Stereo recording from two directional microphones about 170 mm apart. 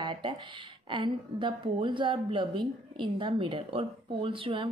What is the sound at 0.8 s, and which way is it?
A woman's voice, 30° right (ahead or behind).